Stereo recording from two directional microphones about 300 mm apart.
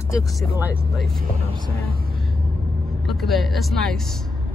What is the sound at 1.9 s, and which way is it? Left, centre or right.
Vehicle, right.